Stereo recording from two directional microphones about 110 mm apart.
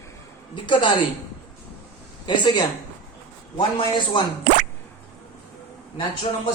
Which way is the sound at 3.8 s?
45° left (ahead or behind).